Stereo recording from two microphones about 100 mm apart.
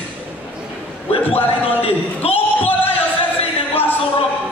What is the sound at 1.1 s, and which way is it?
Speech, 75° left (ahead or behind).